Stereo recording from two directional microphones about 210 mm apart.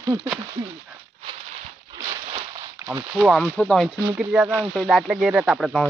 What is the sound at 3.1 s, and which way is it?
Speech, centre (ahead or behind).